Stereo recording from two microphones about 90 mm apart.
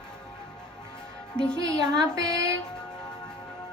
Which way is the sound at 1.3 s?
55° left (ahead or behind).